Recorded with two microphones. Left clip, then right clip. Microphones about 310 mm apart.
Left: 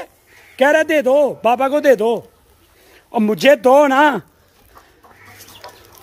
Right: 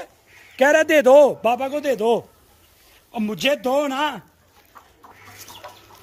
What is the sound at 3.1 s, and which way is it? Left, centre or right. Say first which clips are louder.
Speech: left 9 dB; centre.